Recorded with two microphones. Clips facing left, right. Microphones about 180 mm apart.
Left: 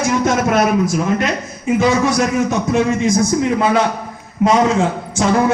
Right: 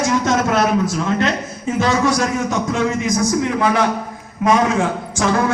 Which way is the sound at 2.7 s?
25° left (ahead or behind).